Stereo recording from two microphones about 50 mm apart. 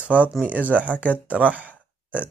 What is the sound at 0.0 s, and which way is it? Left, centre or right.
Speech, right.